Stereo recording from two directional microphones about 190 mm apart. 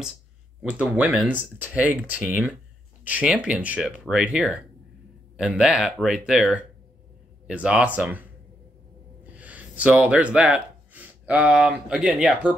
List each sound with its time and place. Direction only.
0.6 s speech: 5° right (ahead or behind)
9.4 s speech: 10° right (ahead or behind)